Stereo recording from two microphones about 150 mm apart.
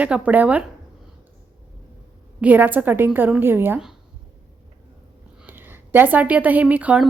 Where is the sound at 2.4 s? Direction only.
10° right (ahead or behind).